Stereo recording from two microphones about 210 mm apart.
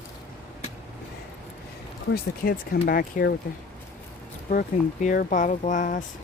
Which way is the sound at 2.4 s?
40° left (ahead or behind).